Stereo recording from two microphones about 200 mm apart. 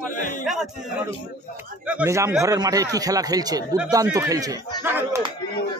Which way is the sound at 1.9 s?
10° right (ahead or behind).